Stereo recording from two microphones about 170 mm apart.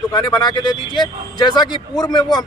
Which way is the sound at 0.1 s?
25° left (ahead or behind).